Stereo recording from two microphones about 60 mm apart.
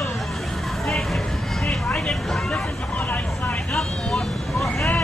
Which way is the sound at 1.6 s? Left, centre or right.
Centre.